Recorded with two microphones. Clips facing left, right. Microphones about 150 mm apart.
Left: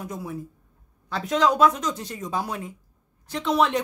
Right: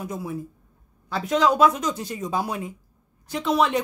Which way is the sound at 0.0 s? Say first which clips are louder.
Right 2 dB; 5° right (ahead or behind).